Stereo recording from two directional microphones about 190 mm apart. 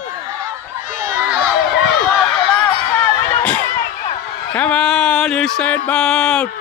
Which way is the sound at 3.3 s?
10° left (ahead or behind).